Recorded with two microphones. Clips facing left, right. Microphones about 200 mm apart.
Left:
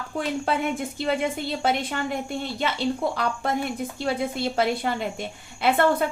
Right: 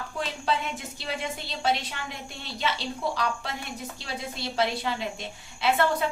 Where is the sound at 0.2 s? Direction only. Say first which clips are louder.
Left 5 dB; 55° left (ahead or behind).